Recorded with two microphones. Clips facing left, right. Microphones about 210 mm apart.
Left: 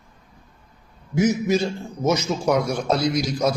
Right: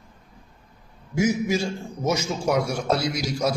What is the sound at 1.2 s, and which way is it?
A man's voice, 10° right (ahead or behind).